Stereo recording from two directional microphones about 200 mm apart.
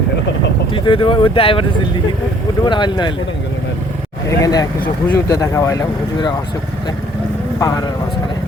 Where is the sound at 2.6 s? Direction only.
20° left (ahead or behind).